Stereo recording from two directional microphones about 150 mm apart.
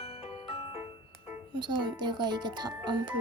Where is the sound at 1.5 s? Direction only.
30° right (ahead or behind).